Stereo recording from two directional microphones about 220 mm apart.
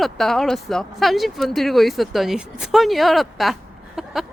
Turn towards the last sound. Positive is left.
turn(degrees=0)  # may be behind; listen again after turning